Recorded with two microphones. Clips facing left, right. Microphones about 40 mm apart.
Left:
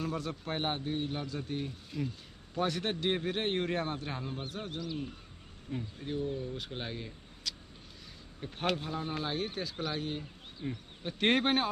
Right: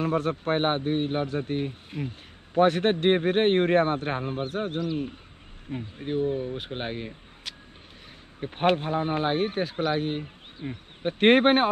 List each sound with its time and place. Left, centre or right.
0.0 s a man's voice: right
5.7 s a man's voice: right
10.6 s speech: right
11.0 s a man's voice: right